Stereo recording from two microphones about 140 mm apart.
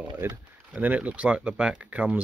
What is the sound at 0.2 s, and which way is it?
Speech, 15° right (ahead or behind).